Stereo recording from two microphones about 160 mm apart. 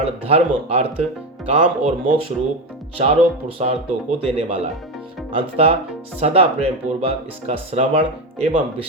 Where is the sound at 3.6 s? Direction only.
40° right (ahead or behind).